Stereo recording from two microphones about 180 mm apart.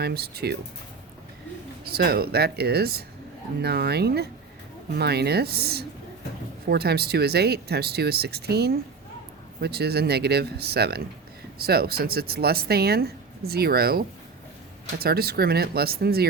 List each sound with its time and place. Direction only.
0.0 s speech: 60° right (ahead or behind)
1.8 s speech: 60° right (ahead or behind)